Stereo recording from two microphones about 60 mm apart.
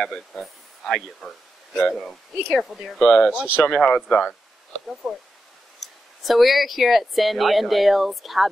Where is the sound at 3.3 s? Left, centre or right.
Right.